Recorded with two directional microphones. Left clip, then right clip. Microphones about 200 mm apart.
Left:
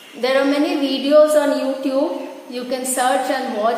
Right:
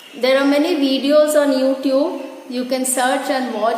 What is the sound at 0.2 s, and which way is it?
A woman's voice, 30° right (ahead or behind).